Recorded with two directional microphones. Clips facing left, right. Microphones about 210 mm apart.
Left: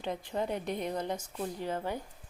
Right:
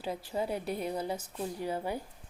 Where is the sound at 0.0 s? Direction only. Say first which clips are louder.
Even; 5° right (ahead or behind).